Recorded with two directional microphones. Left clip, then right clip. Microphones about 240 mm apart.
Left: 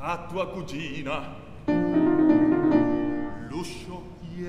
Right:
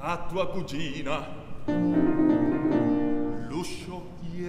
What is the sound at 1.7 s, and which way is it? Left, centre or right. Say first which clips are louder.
Music: left 2 dB; left.